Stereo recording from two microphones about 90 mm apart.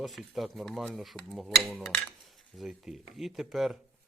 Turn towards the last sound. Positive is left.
turn(degrees=-5)  # may be behind; listen again after turning